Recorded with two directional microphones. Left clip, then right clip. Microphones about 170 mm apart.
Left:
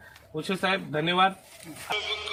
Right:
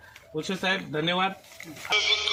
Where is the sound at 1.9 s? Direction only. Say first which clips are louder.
Right 7 dB; 30° right (ahead or behind).